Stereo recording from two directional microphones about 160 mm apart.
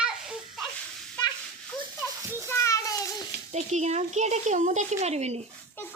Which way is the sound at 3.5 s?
45° right (ahead or behind).